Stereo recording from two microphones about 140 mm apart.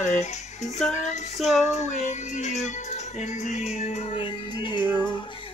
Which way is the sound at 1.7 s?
60° left (ahead or behind).